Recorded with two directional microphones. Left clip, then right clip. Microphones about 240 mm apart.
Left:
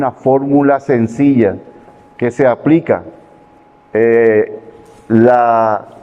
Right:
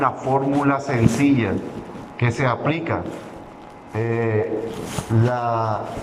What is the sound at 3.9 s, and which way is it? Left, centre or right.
Speech, left.